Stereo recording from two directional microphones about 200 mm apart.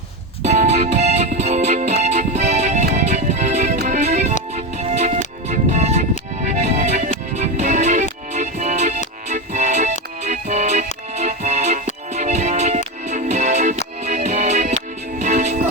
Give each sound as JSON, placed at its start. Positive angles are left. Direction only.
{"t": 0.4, "sound": "music", "side_deg": -35}